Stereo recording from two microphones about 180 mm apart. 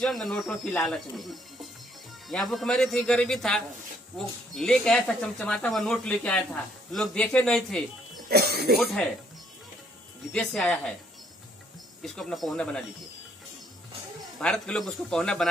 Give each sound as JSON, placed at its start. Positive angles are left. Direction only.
{"t": 0.0, "sound": "speech", "side_deg": 0}
{"t": 8.3, "sound": "speech", "side_deg": -60}
{"t": 8.7, "sound": "speech", "side_deg": 0}
{"t": 10.3, "sound": "speech", "side_deg": 0}
{"t": 12.0, "sound": "speech", "side_deg": 0}
{"t": 14.4, "sound": "speech", "side_deg": 5}